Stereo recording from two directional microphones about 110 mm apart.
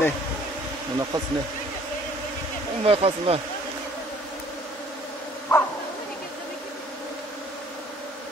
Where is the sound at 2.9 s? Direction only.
60° right (ahead or behind).